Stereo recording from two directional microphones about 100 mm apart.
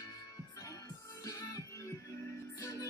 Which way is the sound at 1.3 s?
35° left (ahead or behind).